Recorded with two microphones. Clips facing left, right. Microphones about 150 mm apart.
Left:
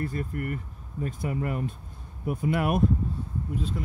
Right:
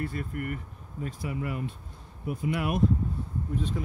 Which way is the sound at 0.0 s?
40° left (ahead or behind).